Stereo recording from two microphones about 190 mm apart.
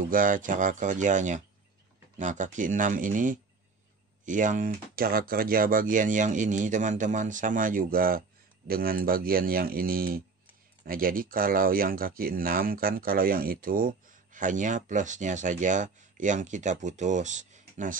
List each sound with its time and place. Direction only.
0.0 s speech: 45° right (ahead or behind)